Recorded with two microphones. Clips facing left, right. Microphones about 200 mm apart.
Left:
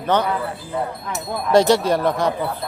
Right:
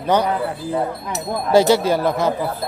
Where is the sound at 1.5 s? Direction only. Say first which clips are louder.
Right 1 dB; 5° right (ahead or behind).